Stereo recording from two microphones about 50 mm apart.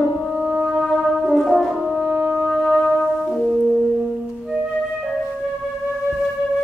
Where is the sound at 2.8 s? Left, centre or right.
Left.